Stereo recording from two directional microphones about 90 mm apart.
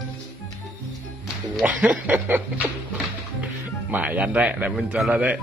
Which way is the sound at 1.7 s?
15° right (ahead or behind).